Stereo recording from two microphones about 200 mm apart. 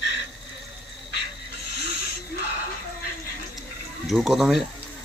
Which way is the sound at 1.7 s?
55° left (ahead or behind).